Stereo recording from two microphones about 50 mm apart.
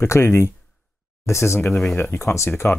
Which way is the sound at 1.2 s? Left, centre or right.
Left.